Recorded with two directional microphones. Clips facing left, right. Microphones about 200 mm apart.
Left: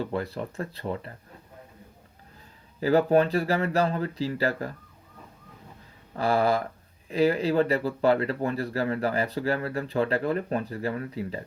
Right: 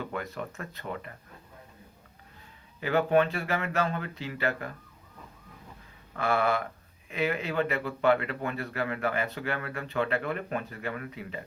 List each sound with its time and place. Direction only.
0.0 s speech: 35° left (ahead or behind)
2.8 s speech: 35° left (ahead or behind)
6.1 s speech: 35° left (ahead or behind)